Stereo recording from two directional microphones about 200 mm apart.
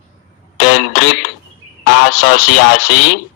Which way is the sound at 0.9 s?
90° left.